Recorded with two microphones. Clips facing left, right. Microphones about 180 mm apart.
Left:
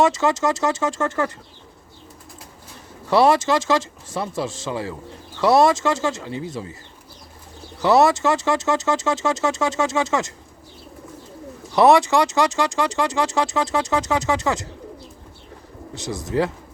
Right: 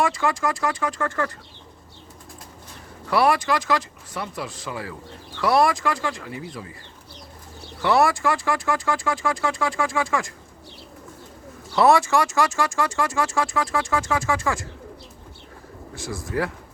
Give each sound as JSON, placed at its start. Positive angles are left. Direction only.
{"t": 0.0, "sound": "speech", "side_deg": 20}
{"t": 3.1, "sound": "speech", "side_deg": 25}
{"t": 7.8, "sound": "speech", "side_deg": 20}
{"t": 11.7, "sound": "speech", "side_deg": 20}
{"t": 16.0, "sound": "speech", "side_deg": 20}